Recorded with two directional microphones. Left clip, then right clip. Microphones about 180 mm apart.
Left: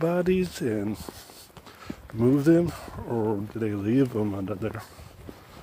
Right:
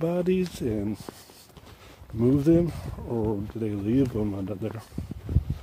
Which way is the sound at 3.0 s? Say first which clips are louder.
Left 1 dB; centre (ahead or behind).